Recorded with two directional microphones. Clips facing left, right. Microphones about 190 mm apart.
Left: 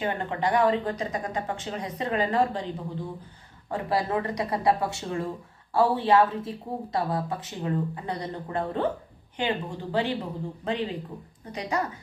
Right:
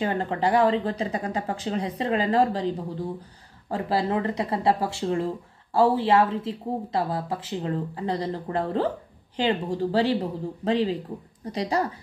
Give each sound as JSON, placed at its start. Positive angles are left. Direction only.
{"t": 0.0, "sound": "speech", "side_deg": -30}
{"t": 3.7, "sound": "speech", "side_deg": -25}